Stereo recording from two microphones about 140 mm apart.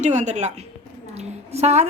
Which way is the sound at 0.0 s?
60° right (ahead or behind).